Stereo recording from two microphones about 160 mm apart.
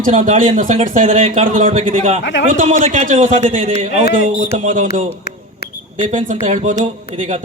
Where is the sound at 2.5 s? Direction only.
55° right (ahead or behind).